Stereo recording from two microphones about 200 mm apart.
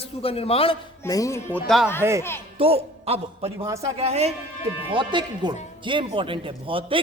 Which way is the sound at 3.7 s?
15° right (ahead or behind).